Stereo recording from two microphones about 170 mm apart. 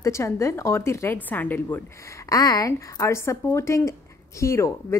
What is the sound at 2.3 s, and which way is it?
A woman's voice, 20° left (ahead or behind).